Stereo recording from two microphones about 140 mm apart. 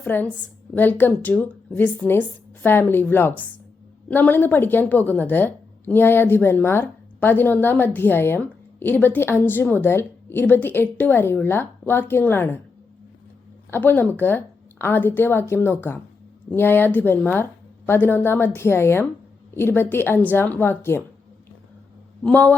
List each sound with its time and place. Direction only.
0.0 s a woman's voice: 15° left (ahead or behind)
13.7 s a woman's voice: 15° left (ahead or behind)
22.2 s a woman's voice: 10° left (ahead or behind)